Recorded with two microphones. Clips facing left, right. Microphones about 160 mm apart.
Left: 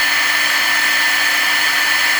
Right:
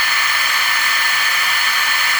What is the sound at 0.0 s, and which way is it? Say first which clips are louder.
Hair dryer: even; 70° left (ahead or behind).